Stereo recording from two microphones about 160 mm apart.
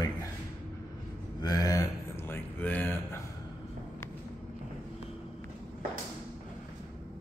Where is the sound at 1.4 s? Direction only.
25° left (ahead or behind).